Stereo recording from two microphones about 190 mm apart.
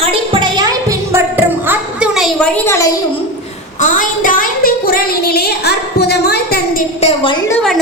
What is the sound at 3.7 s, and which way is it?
A woman's voice, 45° left (ahead or behind).